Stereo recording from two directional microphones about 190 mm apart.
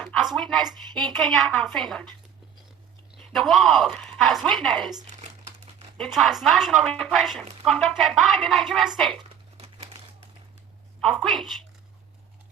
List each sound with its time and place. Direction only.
0.0 s a woman's voice: 5° left (ahead or behind)
3.3 s a woman's voice: centre (ahead or behind)
5.0 s crumpling: 40° right (ahead or behind)
6.1 s a woman's voice: centre (ahead or behind)
9.6 s crumpling: 35° right (ahead or behind)
11.0 s a woman's voice: 5° left (ahead or behind)